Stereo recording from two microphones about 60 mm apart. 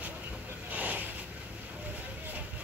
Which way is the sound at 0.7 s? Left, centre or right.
Right.